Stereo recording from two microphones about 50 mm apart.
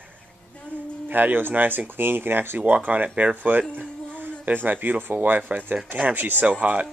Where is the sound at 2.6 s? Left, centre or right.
Right.